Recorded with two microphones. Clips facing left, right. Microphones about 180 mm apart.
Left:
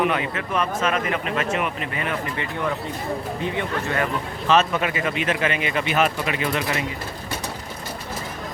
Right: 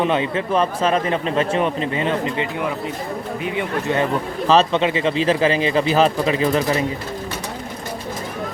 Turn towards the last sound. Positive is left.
turn(degrees=-35)  # may be behind; listen again after turning